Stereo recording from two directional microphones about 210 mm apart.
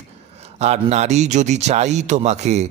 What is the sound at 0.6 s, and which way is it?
A man's voice, 30° right (ahead or behind).